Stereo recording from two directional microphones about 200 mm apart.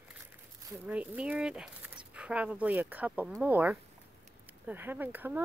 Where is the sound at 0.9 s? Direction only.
5° right (ahead or behind).